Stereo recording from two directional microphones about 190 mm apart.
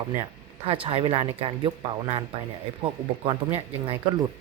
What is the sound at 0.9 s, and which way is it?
Speech, 30° right (ahead or behind).